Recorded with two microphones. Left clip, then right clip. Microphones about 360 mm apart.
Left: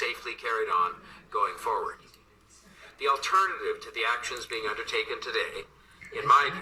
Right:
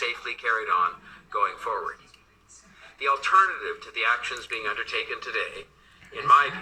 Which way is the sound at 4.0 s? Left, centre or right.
Centre.